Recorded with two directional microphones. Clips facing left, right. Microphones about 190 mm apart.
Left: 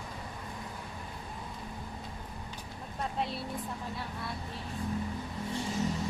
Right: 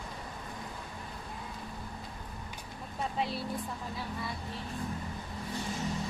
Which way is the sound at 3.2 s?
Centre (ahead or behind).